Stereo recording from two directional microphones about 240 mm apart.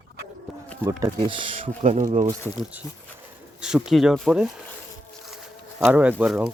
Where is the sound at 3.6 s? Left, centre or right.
Centre.